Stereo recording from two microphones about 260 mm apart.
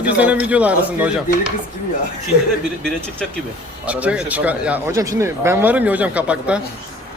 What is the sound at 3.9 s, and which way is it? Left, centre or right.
Speech, centre.